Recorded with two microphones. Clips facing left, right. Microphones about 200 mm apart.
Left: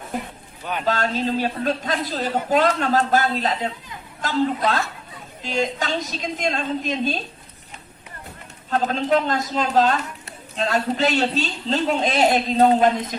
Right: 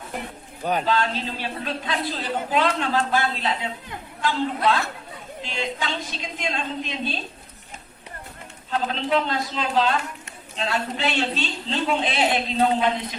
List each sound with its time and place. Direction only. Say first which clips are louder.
0.6 s a man's voice: right 4 dB; 40° right (ahead or behind)
0.9 s a woman's voice: left 2 dB; 45° left (ahead or behind)
8.7 s a woman's voice: left 3 dB; 45° left (ahead or behind)